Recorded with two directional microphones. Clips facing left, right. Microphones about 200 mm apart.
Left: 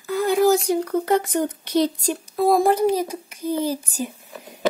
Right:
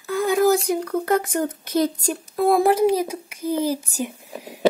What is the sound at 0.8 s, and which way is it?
Speech, 5° left (ahead or behind).